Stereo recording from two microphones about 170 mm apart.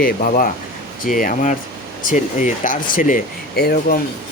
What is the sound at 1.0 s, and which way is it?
Speech, 55° left (ahead or behind).